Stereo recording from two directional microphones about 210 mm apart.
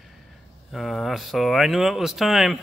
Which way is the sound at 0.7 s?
Centre (ahead or behind).